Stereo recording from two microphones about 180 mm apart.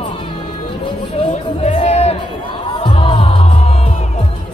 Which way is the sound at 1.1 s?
30° left (ahead or behind).